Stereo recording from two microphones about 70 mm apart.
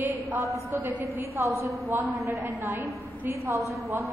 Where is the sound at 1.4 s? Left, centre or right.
Right.